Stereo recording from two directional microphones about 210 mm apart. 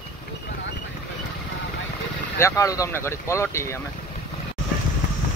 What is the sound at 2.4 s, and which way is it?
Speech, 15° left (ahead or behind).